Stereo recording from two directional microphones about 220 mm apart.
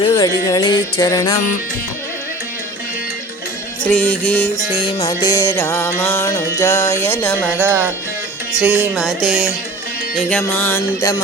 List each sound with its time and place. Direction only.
0.0 s music: 15° left (ahead or behind)
3.8 s music: 5° left (ahead or behind)
4.5 s music: 25° left (ahead or behind)
7.6 s speech: 10° right (ahead or behind)
8.5 s music: 5° right (ahead or behind); by 11.2 s 10° left (ahead or behind)